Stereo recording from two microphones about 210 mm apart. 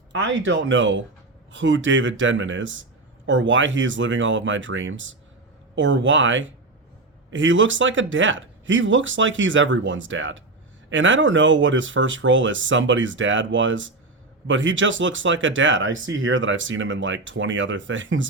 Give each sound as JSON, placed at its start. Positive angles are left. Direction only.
{"t": 0.1, "sound": "speech", "side_deg": -60}